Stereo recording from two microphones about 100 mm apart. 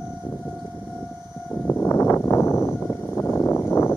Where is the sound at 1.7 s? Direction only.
25° left (ahead or behind).